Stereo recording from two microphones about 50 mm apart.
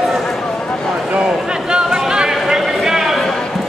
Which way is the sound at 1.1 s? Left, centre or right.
Centre.